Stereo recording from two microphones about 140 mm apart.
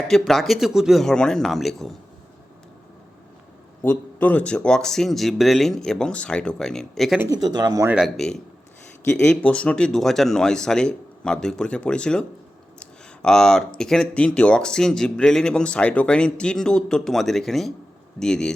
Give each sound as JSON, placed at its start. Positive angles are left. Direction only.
{"t": 0.1, "sound": "speech", "side_deg": 0}
{"t": 3.8, "sound": "speech", "side_deg": 10}
{"t": 7.3, "sound": "speech", "side_deg": -30}
{"t": 7.9, "sound": "speech", "side_deg": 0}
{"t": 12.8, "sound": "a sound", "side_deg": 5}
{"t": 13.7, "sound": "speech", "side_deg": 5}